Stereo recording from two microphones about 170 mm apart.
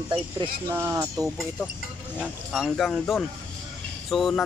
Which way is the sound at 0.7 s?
15° right (ahead or behind).